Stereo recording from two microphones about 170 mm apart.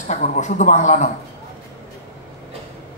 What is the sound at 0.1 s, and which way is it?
Speech, 45° left (ahead or behind).